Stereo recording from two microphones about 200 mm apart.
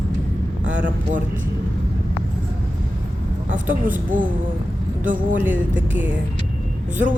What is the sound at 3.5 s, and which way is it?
Speech, 40° right (ahead or behind).